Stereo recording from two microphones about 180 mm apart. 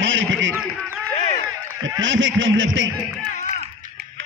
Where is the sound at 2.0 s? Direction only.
90° right.